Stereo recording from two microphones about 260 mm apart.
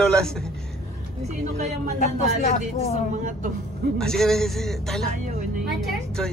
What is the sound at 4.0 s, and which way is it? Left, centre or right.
Speech, centre.